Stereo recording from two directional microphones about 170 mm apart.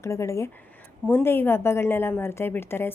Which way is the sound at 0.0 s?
15° left (ahead or behind).